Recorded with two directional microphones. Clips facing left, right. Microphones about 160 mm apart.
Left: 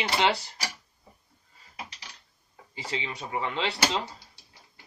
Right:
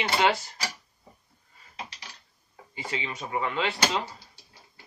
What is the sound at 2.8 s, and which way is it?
Speech, centre (ahead or behind).